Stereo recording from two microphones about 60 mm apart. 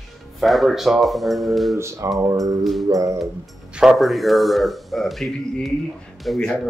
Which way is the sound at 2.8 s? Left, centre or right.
Right.